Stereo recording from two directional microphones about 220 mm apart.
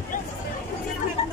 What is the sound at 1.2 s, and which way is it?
Chatter, 30° left (ahead or behind).